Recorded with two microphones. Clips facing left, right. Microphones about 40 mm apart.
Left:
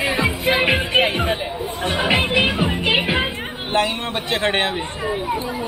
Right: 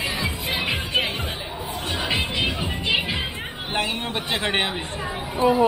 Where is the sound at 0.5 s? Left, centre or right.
Left.